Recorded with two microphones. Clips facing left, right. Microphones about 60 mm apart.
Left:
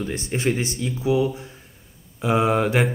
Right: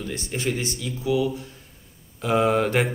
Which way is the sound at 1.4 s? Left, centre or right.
Left.